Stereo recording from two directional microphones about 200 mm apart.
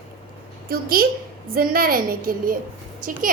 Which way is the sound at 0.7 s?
50° right (ahead or behind).